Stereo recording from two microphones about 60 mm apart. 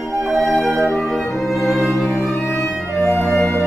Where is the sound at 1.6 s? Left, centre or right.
Centre.